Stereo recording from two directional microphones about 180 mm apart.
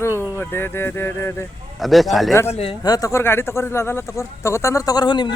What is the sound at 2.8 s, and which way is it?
A man's voice, 20° left (ahead or behind).